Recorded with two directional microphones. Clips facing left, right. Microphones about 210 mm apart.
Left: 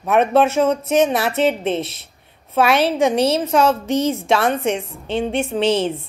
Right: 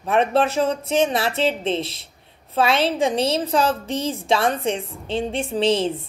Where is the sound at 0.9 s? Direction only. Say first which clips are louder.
Left 2 dB; 30° right (ahead or behind).